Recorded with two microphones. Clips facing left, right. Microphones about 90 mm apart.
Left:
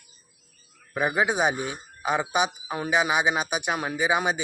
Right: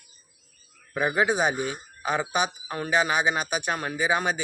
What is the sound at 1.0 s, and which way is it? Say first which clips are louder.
Speech: even; 5° left (ahead or behind).